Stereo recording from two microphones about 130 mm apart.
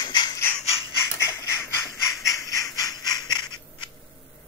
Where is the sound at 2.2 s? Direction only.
25° left (ahead or behind).